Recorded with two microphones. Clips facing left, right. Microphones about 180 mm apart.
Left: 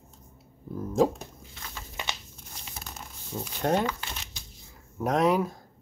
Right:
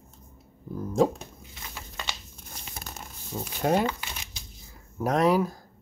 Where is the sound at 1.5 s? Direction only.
10° right (ahead or behind).